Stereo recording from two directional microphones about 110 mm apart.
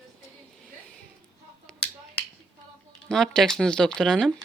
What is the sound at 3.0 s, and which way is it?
Speech, 5° left (ahead or behind).